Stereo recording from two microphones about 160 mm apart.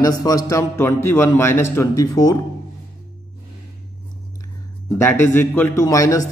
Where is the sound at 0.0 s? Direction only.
25° left (ahead or behind).